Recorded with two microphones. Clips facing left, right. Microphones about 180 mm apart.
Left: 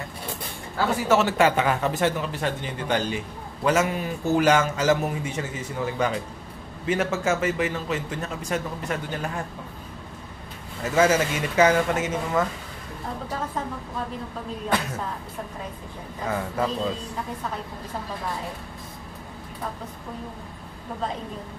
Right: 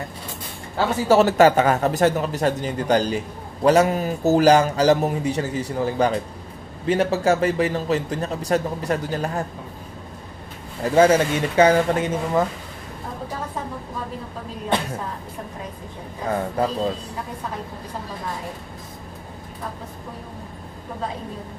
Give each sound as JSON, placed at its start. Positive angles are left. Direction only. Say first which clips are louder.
{"t": 0.7, "sound": "a man's voice", "louder": "right 4 dB", "side_deg": -35}
{"t": 10.8, "sound": "a man's voice", "louder": "right 5 dB", "side_deg": -35}
{"t": 16.5, "sound": "a man's voice", "louder": "right 3 dB", "side_deg": -35}